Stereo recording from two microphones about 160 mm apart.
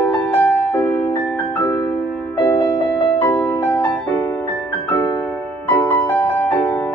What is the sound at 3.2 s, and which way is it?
Music, 15° left (ahead or behind).